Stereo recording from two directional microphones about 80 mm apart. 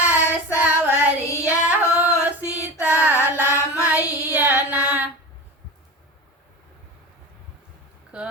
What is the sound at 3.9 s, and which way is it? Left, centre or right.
Child singing, centre.